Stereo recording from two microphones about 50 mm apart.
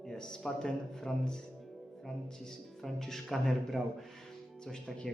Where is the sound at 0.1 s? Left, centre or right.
Centre.